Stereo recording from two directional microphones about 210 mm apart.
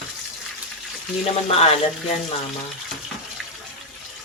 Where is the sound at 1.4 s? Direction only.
30° left (ahead or behind).